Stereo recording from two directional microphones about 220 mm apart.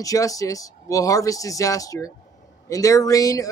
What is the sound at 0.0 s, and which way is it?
Speech, 15° left (ahead or behind).